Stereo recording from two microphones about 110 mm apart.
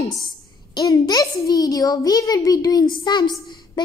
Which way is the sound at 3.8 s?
45° left (ahead or behind).